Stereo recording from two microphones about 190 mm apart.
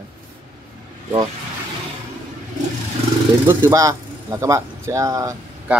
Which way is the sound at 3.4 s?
15° right (ahead or behind).